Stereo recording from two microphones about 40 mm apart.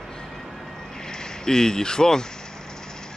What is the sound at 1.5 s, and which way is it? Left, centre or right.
Speech, centre.